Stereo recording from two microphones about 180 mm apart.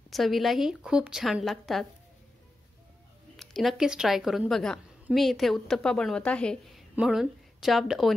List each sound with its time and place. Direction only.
0.1 s a woman's voice: centre (ahead or behind)
3.3 s a woman's voice: centre (ahead or behind)